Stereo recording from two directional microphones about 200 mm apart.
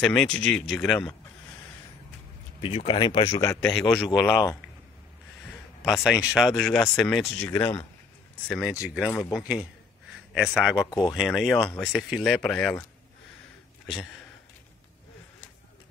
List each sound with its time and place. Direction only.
0.0 s speech: 5° left (ahead or behind)
2.6 s speech: 25° left (ahead or behind)
3.9 s speech: centre (ahead or behind)
4.3 s speech: 20° left (ahead or behind)
5.9 s speech: centre (ahead or behind)
8.5 s speech: centre (ahead or behind)
10.9 s speech: 20° left (ahead or behind)
11.1 s speech: centre (ahead or behind)